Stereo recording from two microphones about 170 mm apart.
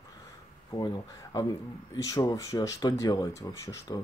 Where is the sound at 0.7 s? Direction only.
25° left (ahead or behind).